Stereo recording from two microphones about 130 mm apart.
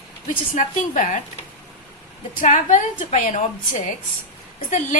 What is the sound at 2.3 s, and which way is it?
A woman's voice, 70° left (ahead or behind).